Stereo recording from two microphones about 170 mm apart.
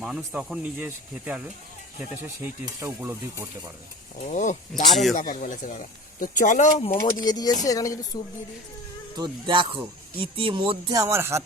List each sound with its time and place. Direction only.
0.3 s speech: 5° right (ahead or behind)
2.4 s speech: 15° right (ahead or behind)
4.2 s speech: 45° left (ahead or behind)
6.9 s speech: 20° left (ahead or behind)
9.1 s music: 25° right (ahead or behind)
11.0 s speech: 15° right (ahead or behind)